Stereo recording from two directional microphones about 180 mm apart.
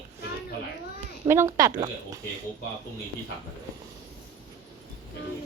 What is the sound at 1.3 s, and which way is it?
Speech, 15° right (ahead or behind).